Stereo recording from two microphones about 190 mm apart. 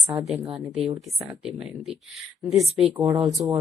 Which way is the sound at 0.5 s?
5° right (ahead or behind).